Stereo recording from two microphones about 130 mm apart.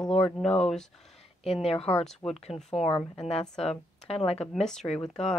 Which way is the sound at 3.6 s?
50° left (ahead or behind).